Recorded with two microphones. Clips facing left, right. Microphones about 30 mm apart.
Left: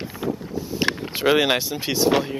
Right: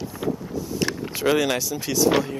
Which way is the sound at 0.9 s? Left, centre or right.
Left.